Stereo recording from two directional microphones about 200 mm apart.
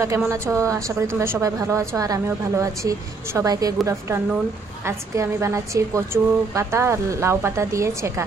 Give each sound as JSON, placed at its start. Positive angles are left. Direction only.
{"t": 0.0, "sound": "a woman's voice", "side_deg": -15}